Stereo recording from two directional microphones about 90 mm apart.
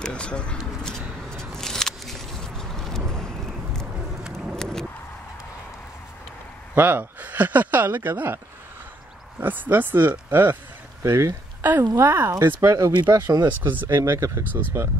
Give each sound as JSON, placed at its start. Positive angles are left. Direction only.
{"t": 0.0, "sound": "a sound", "side_deg": 10}
{"t": 6.7, "sound": "speech", "side_deg": -20}
{"t": 9.4, "sound": "speech", "side_deg": -20}
{"t": 13.6, "sound": "speech", "side_deg": -20}